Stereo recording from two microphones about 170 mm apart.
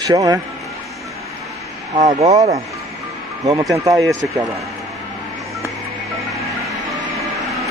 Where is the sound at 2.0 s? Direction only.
40° right (ahead or behind).